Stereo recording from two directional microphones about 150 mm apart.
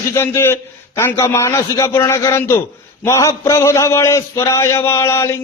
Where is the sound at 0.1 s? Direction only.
15° left (ahead or behind).